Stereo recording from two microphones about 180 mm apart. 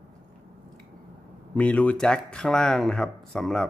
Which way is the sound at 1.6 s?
10° left (ahead or behind).